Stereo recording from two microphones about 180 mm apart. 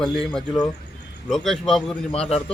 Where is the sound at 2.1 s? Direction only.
35° left (ahead or behind).